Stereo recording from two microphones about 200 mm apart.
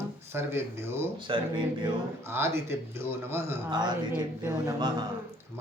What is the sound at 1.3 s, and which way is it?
Speech, 25° right (ahead or behind).